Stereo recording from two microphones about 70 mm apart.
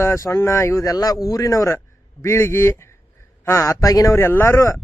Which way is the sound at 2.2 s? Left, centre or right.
Left.